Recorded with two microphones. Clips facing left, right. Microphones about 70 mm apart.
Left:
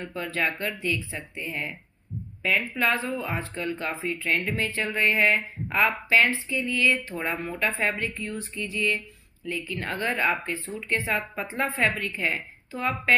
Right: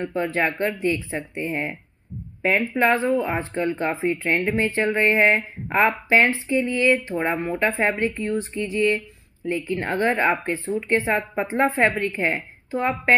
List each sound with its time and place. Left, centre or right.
0.0 s speech: right